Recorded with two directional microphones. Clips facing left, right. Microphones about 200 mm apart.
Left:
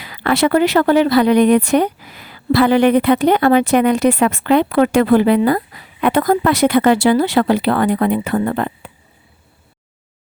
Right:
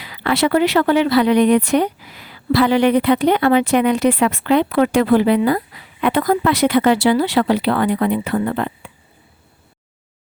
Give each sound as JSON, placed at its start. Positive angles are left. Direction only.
{"t": 0.0, "sound": "speech", "side_deg": 50}